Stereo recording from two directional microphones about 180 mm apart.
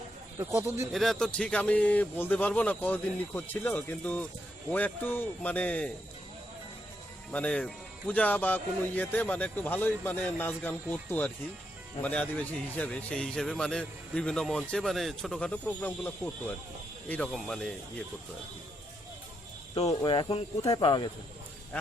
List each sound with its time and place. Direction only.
0.3 s speech: 15° right (ahead or behind)
0.9 s speech: centre (ahead or behind)
7.3 s a man's voice: 5° left (ahead or behind)
19.7 s speech: 35° left (ahead or behind)